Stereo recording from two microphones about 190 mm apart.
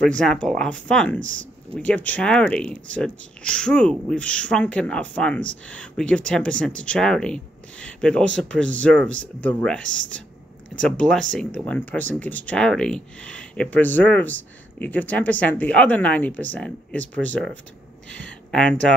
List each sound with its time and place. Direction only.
0.2 s speech: 5° left (ahead or behind)
17.2 s speech: 80° right
18.0 s speech: 5° left (ahead or behind)